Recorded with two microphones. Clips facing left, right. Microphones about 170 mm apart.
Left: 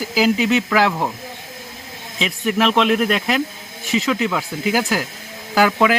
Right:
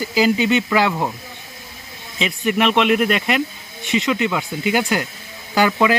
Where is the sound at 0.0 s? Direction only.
Centre (ahead or behind).